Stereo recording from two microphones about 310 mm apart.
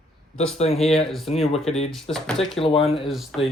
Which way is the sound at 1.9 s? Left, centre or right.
Centre.